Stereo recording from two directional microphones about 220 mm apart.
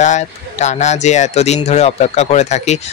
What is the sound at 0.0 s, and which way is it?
Speech, 30° left (ahead or behind).